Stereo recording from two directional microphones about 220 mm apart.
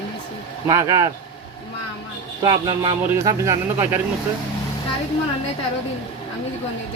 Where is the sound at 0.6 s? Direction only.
15° right (ahead or behind).